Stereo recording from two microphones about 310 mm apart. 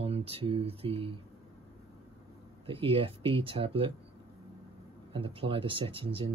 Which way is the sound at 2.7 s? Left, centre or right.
Centre.